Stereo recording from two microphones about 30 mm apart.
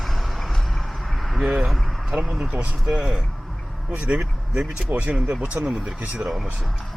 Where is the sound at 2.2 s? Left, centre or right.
Centre.